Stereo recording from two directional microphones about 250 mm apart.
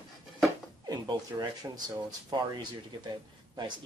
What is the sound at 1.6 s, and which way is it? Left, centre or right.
Speech, centre.